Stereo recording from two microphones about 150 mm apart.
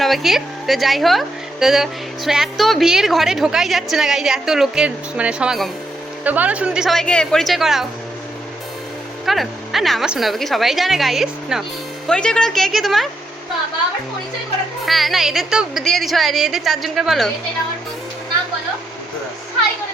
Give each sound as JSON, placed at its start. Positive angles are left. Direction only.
{"t": 0.0, "sound": "a woman's voice", "side_deg": 0}
{"t": 9.2, "sound": "a woman's voice", "side_deg": 0}
{"t": 14.8, "sound": "a woman's voice", "side_deg": 0}